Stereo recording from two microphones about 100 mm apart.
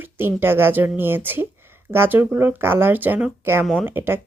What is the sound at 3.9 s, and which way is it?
Speech, 20° right (ahead or behind).